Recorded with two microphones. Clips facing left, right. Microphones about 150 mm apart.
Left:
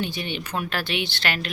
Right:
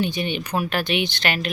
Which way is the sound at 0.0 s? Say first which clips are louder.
Right 5 dB; 15° right (ahead or behind).